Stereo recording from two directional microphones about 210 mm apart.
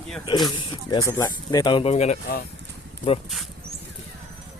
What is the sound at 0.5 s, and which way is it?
Speech, 20° left (ahead or behind).